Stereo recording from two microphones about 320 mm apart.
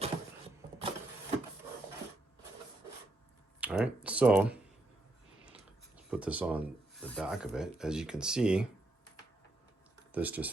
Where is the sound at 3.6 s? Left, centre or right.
Centre.